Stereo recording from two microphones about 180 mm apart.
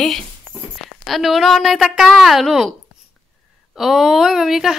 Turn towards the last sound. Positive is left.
turn(degrees=0)  # may be behind; listen again after turning